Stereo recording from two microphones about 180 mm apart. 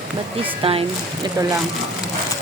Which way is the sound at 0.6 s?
30° right (ahead or behind).